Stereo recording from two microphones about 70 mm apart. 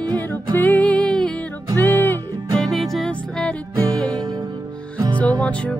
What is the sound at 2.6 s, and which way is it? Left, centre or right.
Music, centre.